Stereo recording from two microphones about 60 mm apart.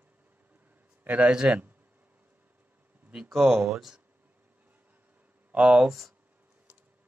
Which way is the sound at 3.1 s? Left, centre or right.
Centre.